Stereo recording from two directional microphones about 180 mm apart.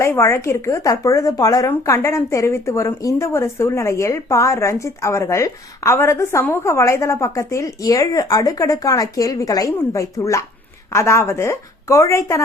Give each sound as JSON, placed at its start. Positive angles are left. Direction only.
{"t": 0.0, "sound": "speech", "side_deg": 15}